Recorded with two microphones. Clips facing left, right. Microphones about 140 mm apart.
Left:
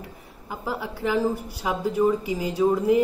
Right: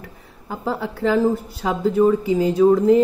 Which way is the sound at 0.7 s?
15° left (ahead or behind).